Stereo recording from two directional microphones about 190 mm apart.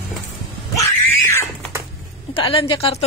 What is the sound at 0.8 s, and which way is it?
Cat, 15° left (ahead or behind).